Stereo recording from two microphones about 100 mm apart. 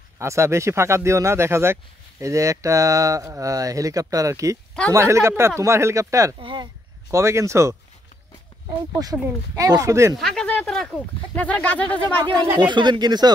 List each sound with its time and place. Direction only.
0.2 s speech: 30° right (ahead or behind)
6.4 s speech: 55° right (ahead or behind)
7.1 s speech: 30° right (ahead or behind)
9.0 s speech: 40° right (ahead or behind)
10.1 s speech: 5° left (ahead or behind)
12.5 s speech: 50° right (ahead or behind)